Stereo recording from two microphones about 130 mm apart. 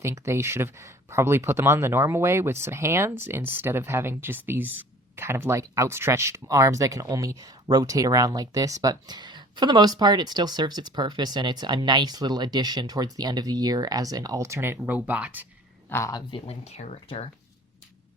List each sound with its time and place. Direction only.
0.0 s speech: 20° right (ahead or behind)
15.9 s speech: 25° left (ahead or behind)
16.3 s speech: 55° left (ahead or behind)